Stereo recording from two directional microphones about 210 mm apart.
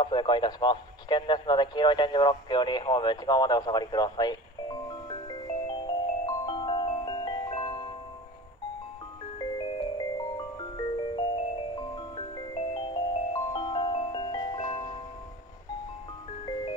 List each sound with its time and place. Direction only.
0.0 s radio: 20° left (ahead or behind)
9.6 s music: 20° left (ahead or behind)
11.8 s marimba: 20° left (ahead or behind)